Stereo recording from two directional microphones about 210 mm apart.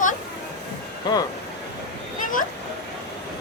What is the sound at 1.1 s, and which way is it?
Speech, 20° left (ahead or behind).